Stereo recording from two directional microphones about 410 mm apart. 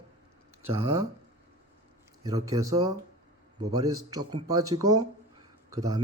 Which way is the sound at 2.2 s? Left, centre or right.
Centre.